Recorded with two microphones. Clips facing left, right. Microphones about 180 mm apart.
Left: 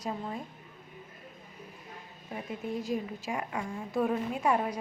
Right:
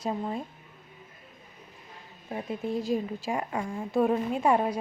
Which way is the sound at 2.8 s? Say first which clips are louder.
Right 4 dB; 30° right (ahead or behind).